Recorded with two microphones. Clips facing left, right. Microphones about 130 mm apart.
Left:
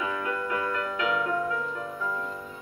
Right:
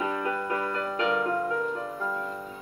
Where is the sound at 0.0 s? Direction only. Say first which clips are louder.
Right 1 dB; 30° right (ahead or behind).